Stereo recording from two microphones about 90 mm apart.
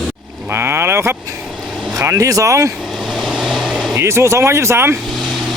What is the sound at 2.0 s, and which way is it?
Speech, 35° right (ahead or behind).